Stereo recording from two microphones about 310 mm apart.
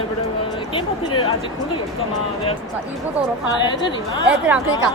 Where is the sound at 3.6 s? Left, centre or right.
Centre.